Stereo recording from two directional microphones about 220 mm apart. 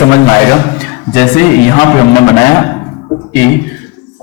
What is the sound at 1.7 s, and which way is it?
Speech, 15° left (ahead or behind).